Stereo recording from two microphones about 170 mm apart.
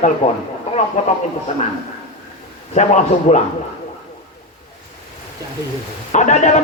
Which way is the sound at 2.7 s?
45° left (ahead or behind).